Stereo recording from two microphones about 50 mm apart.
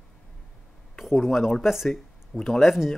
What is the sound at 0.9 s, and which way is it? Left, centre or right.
Speech, centre.